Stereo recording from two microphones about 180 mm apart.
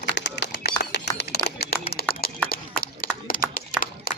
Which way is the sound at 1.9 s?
60° left (ahead or behind).